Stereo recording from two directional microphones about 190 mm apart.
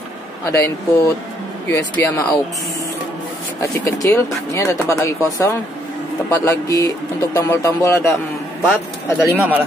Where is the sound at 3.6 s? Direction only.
15° left (ahead or behind).